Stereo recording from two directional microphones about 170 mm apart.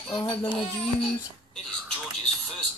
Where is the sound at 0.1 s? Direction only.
25° left (ahead or behind).